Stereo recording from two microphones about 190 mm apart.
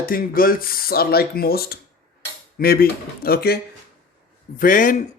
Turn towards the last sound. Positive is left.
turn(degrees=45)  # may be behind; listen again after turning